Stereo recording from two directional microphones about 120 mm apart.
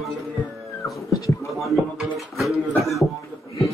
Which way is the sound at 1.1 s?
25° left (ahead or behind).